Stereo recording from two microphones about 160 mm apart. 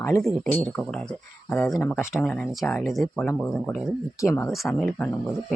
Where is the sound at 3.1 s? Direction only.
15° left (ahead or behind).